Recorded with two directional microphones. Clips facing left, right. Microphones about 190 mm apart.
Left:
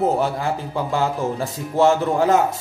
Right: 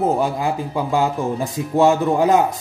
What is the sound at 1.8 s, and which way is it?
Speech, 15° right (ahead or behind).